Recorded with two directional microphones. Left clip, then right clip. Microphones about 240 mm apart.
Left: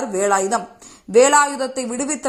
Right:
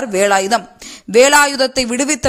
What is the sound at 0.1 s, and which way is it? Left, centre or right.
A man's voice, right.